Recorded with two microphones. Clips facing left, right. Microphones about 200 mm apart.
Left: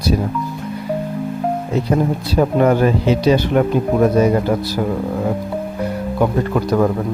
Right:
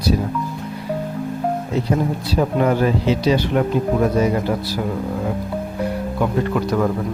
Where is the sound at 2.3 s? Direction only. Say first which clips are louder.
Left 4 dB; 50° left (ahead or behind).